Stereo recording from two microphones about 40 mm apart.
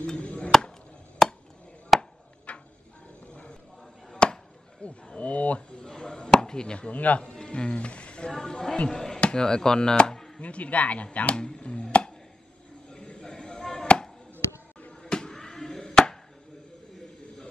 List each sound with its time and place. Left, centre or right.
0.0 s chop: left
0.5 s chop: centre
2.0 s chopping: left
4.1 s chop: left
5.0 s a sound: left
5.9 s chop: centre
6.9 s speech: left
7.3 s music: left
8.3 s a sound: centre
9.2 s chop: centre
10.4 s speech: left
11.3 s music: left
12.9 s chop: left
15.0 s chop: centre